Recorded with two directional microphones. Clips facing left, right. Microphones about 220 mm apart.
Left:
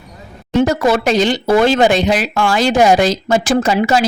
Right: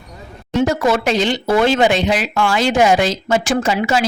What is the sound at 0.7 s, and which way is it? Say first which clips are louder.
Speech: left 2 dB; 40° left (ahead or behind).